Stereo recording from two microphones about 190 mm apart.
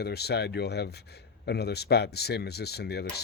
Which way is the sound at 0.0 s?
60° left (ahead or behind).